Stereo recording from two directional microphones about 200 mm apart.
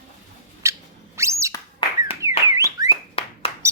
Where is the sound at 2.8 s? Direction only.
30° left (ahead or behind).